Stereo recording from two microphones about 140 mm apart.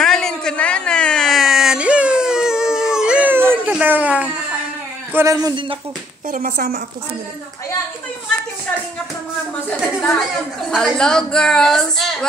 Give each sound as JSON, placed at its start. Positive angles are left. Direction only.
{"t": 0.0, "sound": "a sound", "side_deg": 5}
{"t": 3.7, "sound": "speech", "side_deg": -10}
{"t": 5.1, "sound": "a man's voice", "side_deg": -25}
{"t": 6.3, "sound": "a woman's voice", "side_deg": -90}
{"t": 10.7, "sound": "a woman's voice", "side_deg": 5}